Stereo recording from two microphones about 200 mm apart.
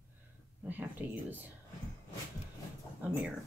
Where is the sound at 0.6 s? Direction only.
10° right (ahead or behind).